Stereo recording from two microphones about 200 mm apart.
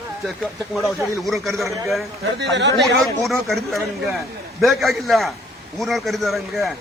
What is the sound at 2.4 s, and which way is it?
Speech, 60° right (ahead or behind).